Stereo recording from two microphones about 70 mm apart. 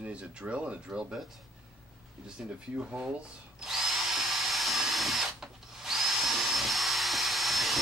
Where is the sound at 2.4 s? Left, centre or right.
Centre.